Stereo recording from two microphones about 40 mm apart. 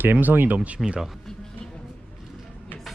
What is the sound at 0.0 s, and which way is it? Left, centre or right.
Speech, right.